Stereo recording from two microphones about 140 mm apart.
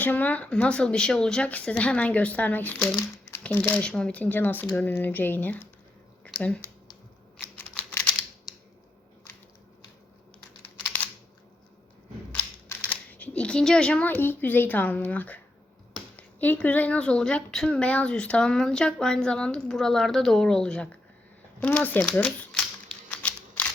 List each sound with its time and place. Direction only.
0.0 s a woman's voice: 10° left (ahead or behind)
7.5 s computer keyboard: 10° left (ahead or behind)
12.9 s a child's voice: 10° left (ahead or behind)
21.9 s typewriter: 5° left (ahead or behind)